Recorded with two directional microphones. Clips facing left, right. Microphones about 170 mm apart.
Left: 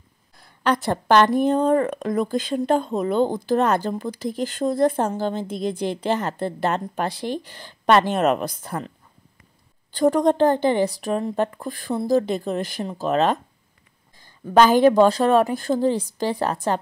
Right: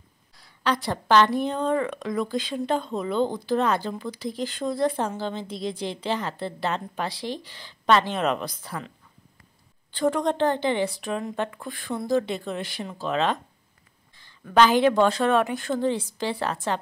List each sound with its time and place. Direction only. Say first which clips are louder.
0.4 s a woman's voice: left 4 dB; 50° left (ahead or behind)
9.9 s speech: left 6 dB; 40° left (ahead or behind)
14.5 s speech: left 4 dB; 45° left (ahead or behind)